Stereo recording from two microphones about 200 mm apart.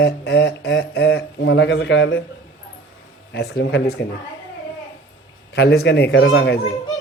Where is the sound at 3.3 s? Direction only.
55° left (ahead or behind).